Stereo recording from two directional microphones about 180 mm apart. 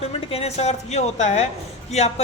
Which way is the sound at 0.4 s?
35° left (ahead or behind).